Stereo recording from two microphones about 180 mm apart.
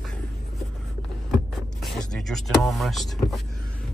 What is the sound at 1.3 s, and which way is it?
Vehicle, centre (ahead or behind).